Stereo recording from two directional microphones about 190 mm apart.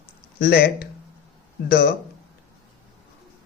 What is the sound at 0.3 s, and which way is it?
Speech, 55° left (ahead or behind).